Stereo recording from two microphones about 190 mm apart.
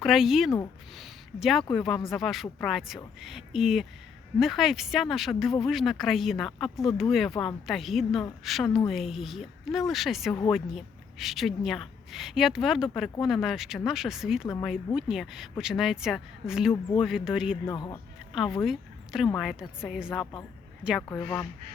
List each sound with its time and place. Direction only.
0.0 s speech: centre (ahead or behind)
0.9 s a sound: centre (ahead or behind)
1.7 s a woman's voice: centre (ahead or behind)
17.7 s speech: 15° left (ahead or behind)
18.6 s speech: centre (ahead or behind)